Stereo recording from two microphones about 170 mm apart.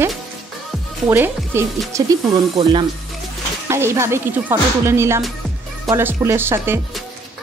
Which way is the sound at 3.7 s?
15° right (ahead or behind).